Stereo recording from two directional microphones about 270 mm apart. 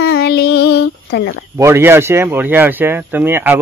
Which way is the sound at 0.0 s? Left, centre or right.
Left.